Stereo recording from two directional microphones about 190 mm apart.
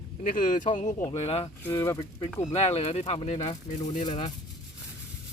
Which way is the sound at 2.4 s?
35° left (ahead or behind).